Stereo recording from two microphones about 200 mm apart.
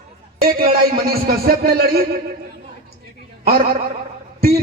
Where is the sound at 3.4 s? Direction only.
50° right (ahead or behind).